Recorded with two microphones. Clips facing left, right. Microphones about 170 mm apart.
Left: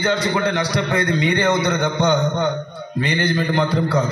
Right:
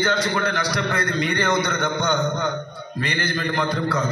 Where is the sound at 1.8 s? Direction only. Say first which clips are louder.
Left 4 dB; 30° left (ahead or behind).